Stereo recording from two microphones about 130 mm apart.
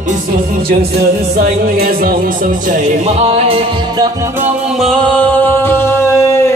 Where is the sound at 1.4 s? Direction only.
90° right; by 3.6 s 50° right (ahead or behind).